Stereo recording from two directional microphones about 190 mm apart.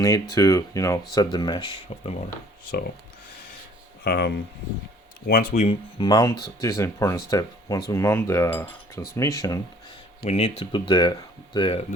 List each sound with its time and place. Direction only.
0.0 s speech: 15° left (ahead or behind)
4.0 s speech: 60° left (ahead or behind)
5.6 s speech: 25° left (ahead or behind)
10.2 s speech: 30° left (ahead or behind)